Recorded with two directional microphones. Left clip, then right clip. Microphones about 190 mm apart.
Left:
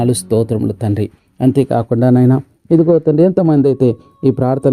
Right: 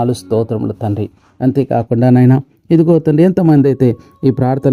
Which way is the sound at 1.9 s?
15° right (ahead or behind).